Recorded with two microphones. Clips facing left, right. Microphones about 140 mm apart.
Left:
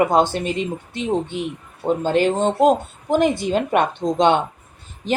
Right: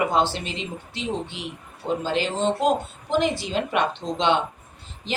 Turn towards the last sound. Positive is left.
turn(degrees=50)  # may be behind; listen again after turning